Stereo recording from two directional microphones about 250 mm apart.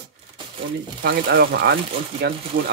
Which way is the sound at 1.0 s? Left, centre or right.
Right.